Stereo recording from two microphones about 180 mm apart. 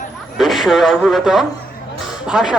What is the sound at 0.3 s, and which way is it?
A man's voice, centre (ahead or behind).